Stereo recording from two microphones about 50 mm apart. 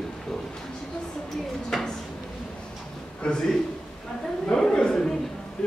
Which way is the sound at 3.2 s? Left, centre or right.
Centre.